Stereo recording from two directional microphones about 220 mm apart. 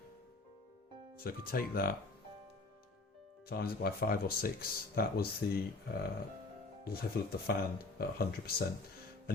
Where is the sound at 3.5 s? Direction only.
45° left (ahead or behind).